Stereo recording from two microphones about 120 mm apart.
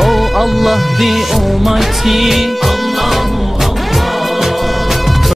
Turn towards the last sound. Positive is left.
turn(degrees=0)  # may be behind; listen again after turning